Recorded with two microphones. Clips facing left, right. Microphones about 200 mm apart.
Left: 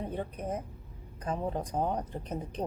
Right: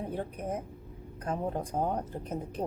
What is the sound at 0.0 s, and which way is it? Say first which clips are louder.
A woman's voice: even; 10° right (ahead or behind).